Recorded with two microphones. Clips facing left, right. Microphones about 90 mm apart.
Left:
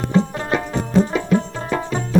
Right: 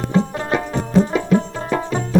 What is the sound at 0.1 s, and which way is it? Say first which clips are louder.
Music: even; 20° right (ahead or behind).